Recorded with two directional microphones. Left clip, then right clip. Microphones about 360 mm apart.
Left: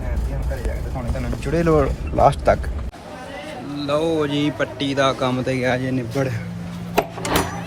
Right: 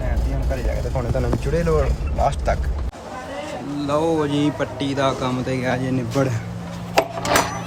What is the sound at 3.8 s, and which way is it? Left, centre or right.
Speech, centre.